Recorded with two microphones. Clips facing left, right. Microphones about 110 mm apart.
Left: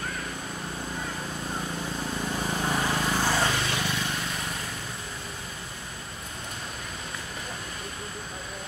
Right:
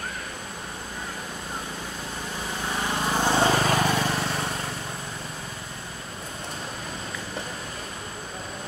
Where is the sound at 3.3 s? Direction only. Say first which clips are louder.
Right 5 dB; 35° right (ahead or behind).